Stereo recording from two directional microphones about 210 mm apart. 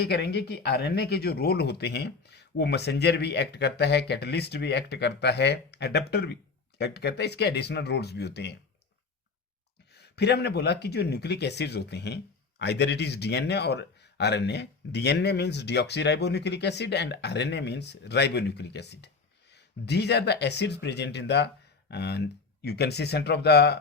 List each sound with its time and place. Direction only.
0.0 s speech: 50° left (ahead or behind)
9.9 s speech: 50° left (ahead or behind)